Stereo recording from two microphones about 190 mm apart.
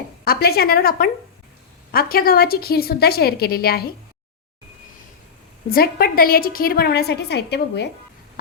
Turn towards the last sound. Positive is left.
turn(degrees=60)  # may be behind; listen again after turning